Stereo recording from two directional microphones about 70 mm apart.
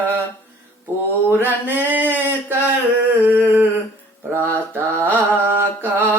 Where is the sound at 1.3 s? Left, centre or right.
Right.